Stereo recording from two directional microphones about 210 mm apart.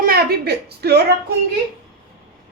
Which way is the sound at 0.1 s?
45° right (ahead or behind).